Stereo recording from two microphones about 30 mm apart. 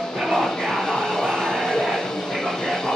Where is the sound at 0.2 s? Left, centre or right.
Centre.